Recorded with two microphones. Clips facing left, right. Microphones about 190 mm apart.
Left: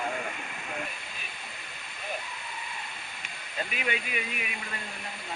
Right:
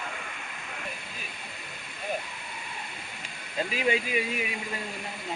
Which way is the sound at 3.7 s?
30° right (ahead or behind).